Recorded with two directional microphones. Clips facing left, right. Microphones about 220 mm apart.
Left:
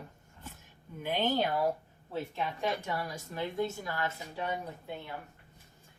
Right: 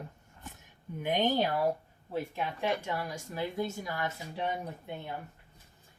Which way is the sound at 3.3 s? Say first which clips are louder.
Left 1 dB; 10° right (ahead or behind).